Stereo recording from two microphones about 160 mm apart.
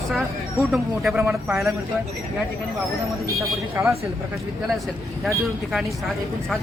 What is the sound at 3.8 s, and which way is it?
Speech, 15° right (ahead or behind).